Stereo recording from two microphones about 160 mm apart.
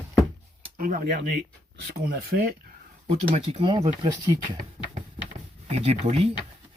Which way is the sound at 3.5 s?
35° right (ahead or behind).